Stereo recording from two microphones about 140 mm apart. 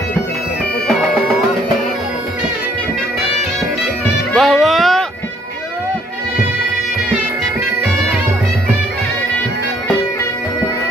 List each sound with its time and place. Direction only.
4.3 s music: centre (ahead or behind)